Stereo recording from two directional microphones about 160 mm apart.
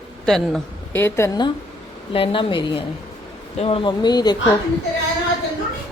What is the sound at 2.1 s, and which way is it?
A woman's voice, 35° left (ahead or behind).